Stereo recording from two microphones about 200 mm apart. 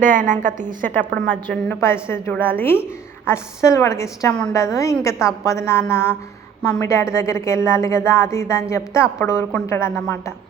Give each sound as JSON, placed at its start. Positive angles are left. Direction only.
{"t": 0.0, "sound": "a woman's voice", "side_deg": -40}
{"t": 1.3, "sound": "a woman's voice", "side_deg": 10}